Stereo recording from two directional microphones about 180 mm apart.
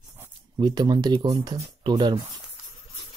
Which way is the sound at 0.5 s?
25° right (ahead or behind).